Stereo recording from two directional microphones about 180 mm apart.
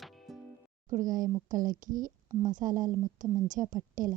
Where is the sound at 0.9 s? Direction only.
45° right (ahead or behind).